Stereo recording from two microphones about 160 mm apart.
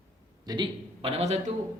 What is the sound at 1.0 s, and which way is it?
Speech, 40° right (ahead or behind).